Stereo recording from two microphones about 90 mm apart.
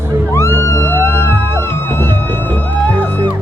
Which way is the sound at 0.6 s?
30° left (ahead or behind).